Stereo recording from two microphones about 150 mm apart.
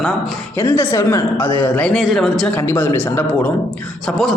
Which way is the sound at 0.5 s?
15° left (ahead or behind).